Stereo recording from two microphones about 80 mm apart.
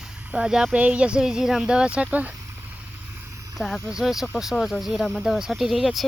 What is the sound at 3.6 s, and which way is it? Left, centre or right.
Speech, centre.